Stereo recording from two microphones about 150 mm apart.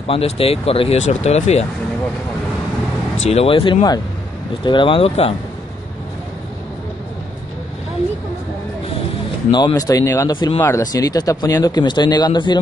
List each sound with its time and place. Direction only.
0.0 s speech: 40° left (ahead or behind)
3.3 s speech: 40° left (ahead or behind)
9.5 s speech: 30° left (ahead or behind)